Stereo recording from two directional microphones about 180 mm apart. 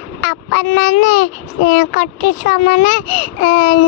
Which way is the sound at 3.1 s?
35° left (ahead or behind).